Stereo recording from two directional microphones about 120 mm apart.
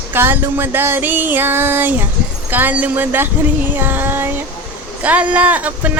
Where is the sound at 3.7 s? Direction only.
15° right (ahead or behind).